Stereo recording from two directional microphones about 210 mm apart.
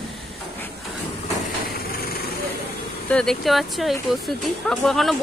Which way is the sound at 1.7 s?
45° left (ahead or behind).